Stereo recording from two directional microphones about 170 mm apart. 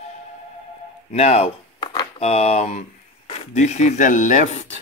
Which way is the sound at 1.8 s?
25° left (ahead or behind).